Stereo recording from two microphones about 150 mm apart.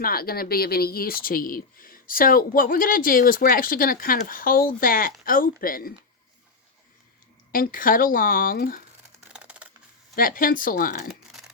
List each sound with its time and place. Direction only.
0.0 s speech: 80° left
7.5 s speech: 70° left (ahead or behind)
9.3 s a sound: 10° right (ahead or behind)
10.2 s speech: 70° left (ahead or behind)
11.1 s crumpling: centre (ahead or behind)